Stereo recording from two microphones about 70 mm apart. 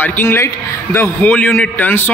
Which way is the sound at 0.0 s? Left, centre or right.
Left.